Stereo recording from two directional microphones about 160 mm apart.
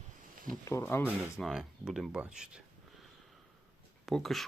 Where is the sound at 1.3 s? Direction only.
Centre (ahead or behind).